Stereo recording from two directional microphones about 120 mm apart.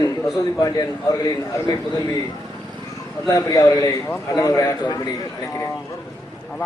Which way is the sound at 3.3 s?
30° left (ahead or behind).